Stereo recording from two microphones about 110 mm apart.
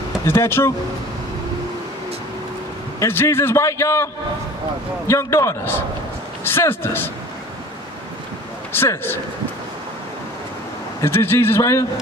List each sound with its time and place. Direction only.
0.2 s a man's voice: 25° left (ahead or behind)
3.0 s a man's voice: 20° left (ahead or behind)
8.7 s a man's voice: 20° left (ahead or behind)
11.0 s a man's voice: 20° left (ahead or behind)